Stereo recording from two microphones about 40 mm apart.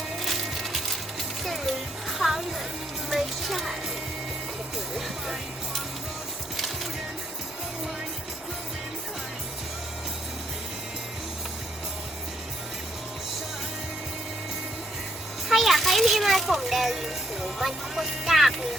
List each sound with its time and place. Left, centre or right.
0.2 s music: centre
4.9 s speech: centre
15.4 s a sound: centre